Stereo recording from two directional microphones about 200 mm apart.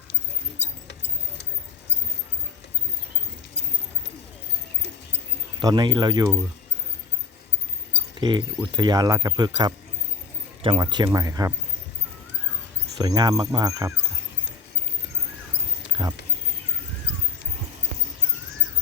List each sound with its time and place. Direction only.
5.5 s speech: 20° right (ahead or behind)
8.2 s speech: 20° right (ahead or behind)
10.6 s speech: 25° right (ahead or behind)
13.0 s speech: 20° right (ahead or behind)
15.9 s a sound: 20° right (ahead or behind)